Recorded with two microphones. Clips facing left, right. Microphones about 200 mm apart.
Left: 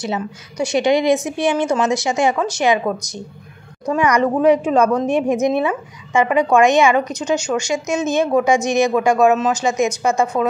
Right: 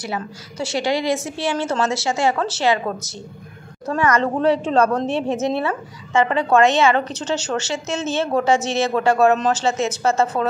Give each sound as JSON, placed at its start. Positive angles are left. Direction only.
{"t": 0.0, "sound": "a woman's voice", "side_deg": 20}